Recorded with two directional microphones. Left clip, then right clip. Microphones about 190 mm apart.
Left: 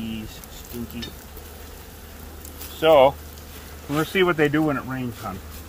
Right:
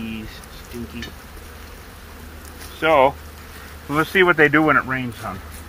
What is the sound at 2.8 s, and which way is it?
Speech, 55° left (ahead or behind).